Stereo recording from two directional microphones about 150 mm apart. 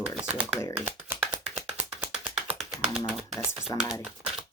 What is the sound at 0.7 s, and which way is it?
Shuffling cards, 10° right (ahead or behind).